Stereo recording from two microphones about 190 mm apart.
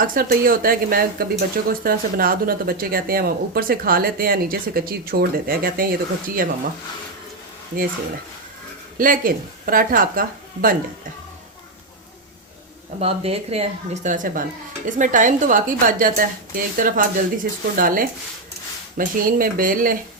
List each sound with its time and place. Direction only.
0.1 s speech: 50° right (ahead or behind)
9.0 s speech: 50° right (ahead or behind)
13.0 s speech: 30° right (ahead or behind); by 20.0 s 45° right (ahead or behind)